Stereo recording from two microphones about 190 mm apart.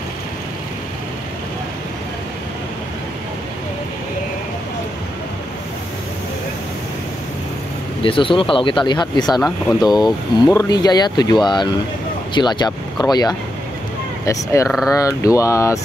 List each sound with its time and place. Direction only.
8.0 s speech: 25° left (ahead or behind)